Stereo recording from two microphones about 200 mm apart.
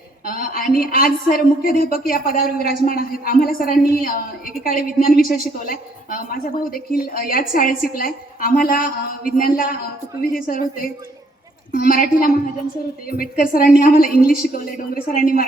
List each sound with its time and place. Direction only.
0.3 s a woman's voice: 45° left (ahead or behind)